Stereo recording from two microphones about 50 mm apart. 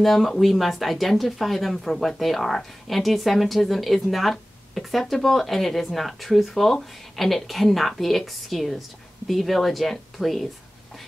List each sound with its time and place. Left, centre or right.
0.0 s speech: centre